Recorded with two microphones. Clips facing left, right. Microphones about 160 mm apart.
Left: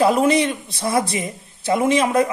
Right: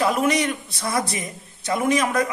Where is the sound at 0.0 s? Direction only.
30° left (ahead or behind).